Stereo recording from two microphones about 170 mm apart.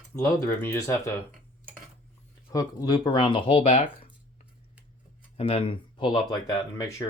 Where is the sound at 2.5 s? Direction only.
25° left (ahead or behind).